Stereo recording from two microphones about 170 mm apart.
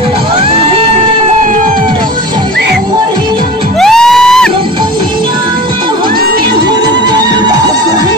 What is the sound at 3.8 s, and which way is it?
Music, centre (ahead or behind).